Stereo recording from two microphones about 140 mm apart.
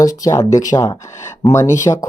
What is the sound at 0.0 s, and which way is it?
Speech, 25° left (ahead or behind).